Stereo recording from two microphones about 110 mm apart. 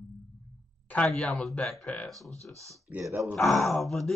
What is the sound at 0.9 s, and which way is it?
Speech, 5° left (ahead or behind).